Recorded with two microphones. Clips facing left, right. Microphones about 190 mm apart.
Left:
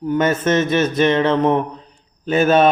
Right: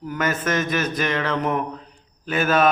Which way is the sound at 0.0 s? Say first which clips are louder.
Left 7 dB; 25° left (ahead or behind).